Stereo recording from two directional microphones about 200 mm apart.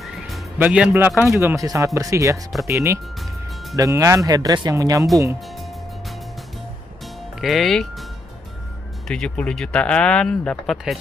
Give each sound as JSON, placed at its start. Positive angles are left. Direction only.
{"t": 0.0, "sound": "speech", "side_deg": -5}
{"t": 7.3, "sound": "speech", "side_deg": 0}